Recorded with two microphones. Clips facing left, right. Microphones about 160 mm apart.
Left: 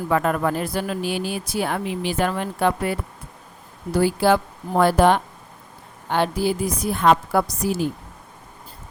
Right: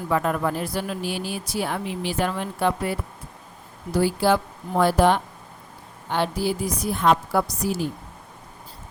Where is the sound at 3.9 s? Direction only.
55° left (ahead or behind).